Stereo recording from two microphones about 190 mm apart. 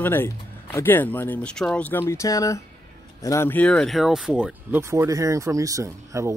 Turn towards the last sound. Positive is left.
turn(degrees=-15)  # may be behind; listen again after turning